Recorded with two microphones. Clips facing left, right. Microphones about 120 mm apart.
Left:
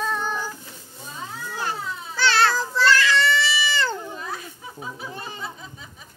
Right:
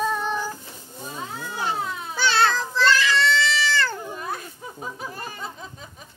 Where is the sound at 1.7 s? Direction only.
60° right (ahead or behind).